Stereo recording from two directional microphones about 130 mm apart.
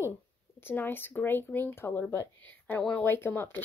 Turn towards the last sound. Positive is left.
turn(degrees=15)  # may be behind; listen again after turning